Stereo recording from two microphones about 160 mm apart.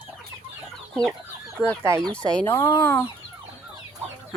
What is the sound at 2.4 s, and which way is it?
Speech, 10° left (ahead or behind).